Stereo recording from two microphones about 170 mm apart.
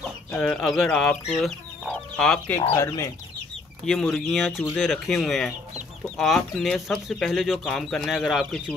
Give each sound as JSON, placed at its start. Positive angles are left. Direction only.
{"t": 0.3, "sound": "speech", "side_deg": 5}
{"t": 2.7, "sound": "speech", "side_deg": 15}
{"t": 3.8, "sound": "speech", "side_deg": 0}